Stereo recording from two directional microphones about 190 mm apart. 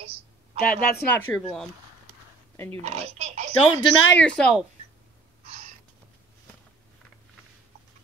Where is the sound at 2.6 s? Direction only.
35° right (ahead or behind).